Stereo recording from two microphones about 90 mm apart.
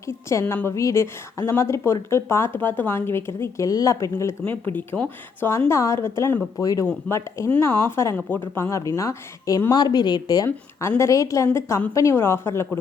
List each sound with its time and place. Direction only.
0.1 s a woman's voice: 30° left (ahead or behind)
3.7 s speech: 40° left (ahead or behind)
4.4 s a woman's voice: 25° left (ahead or behind)
6.6 s a woman's voice: 40° left (ahead or behind)
9.7 s speech: 50° left (ahead or behind)
10.8 s a woman's voice: 30° left (ahead or behind)